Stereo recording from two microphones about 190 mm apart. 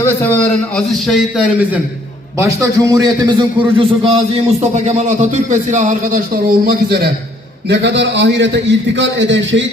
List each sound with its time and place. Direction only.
0.0 s a man's voice: 10° left (ahead or behind)
2.4 s speech: 15° right (ahead or behind)
3.8 s a man's voice: 30° right (ahead or behind); by 9.6 s 75° right (ahead or behind)